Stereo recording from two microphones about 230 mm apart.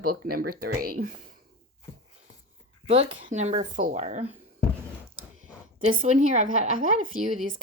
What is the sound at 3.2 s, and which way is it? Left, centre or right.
A woman's voice, right.